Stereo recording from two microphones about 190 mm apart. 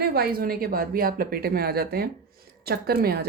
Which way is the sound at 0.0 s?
55° right (ahead or behind).